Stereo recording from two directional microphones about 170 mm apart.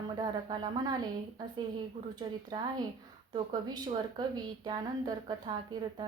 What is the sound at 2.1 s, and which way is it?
A woman's voice, 25° right (ahead or behind).